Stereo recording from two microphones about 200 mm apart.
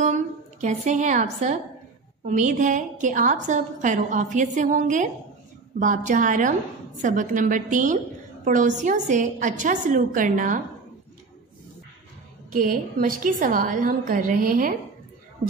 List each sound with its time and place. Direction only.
0.0 s a woman's voice: 35° right (ahead or behind)
12.5 s a woman's voice: 45° right (ahead or behind)